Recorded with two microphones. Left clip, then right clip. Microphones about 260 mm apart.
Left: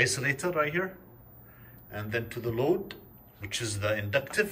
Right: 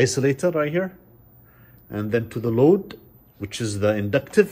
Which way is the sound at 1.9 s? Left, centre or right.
Centre.